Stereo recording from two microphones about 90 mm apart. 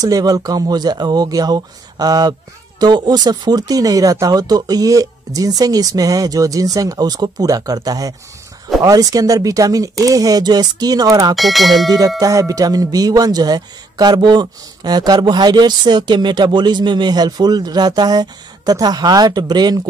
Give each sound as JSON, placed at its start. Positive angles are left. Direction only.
{"t": 0.0, "sound": "speech", "side_deg": -45}
{"t": 11.3, "sound": "speech", "side_deg": 0}
{"t": 12.2, "sound": "speech", "side_deg": -40}